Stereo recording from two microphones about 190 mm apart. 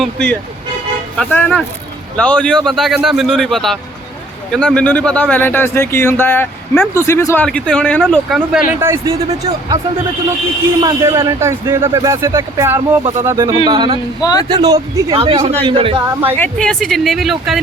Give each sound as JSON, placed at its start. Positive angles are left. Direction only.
{"t": 0.0, "sound": "speech", "side_deg": 5}
{"t": 8.8, "sound": "speech", "side_deg": -15}
{"t": 10.8, "sound": "speech", "side_deg": -15}
{"t": 14.2, "sound": "speech", "side_deg": 20}
{"t": 14.5, "sound": "speech", "side_deg": -20}
{"t": 16.4, "sound": "speech", "side_deg": 5}